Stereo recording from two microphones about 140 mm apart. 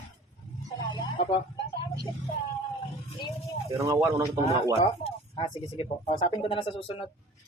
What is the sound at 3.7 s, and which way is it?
Speech, 20° right (ahead or behind).